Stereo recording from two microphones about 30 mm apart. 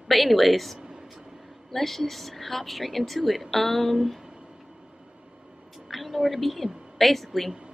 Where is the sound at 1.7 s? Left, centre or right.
Centre.